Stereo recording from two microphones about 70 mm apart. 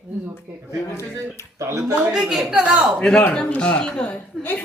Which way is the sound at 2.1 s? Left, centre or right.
Centre.